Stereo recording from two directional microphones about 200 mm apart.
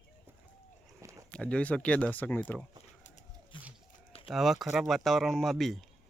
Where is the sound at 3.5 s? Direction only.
25° left (ahead or behind).